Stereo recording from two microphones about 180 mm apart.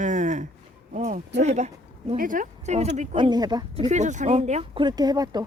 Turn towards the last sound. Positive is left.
turn(degrees=-20)  # may be behind; listen again after turning